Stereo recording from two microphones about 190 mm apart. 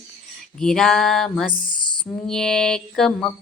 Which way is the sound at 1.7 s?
25° left (ahead or behind).